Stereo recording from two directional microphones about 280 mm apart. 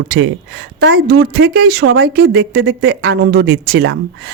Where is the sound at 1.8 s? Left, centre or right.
Right.